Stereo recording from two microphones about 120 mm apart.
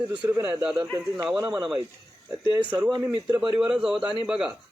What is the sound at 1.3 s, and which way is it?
Speech, 30° right (ahead or behind).